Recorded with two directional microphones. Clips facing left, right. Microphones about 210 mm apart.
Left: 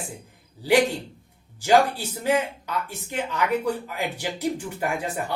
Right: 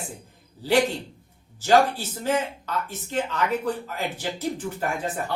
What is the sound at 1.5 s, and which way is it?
Speech, 15° left (ahead or behind).